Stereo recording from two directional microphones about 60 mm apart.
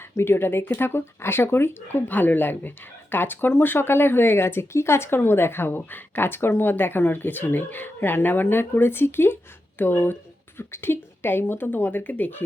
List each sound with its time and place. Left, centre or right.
0.1 s speech: left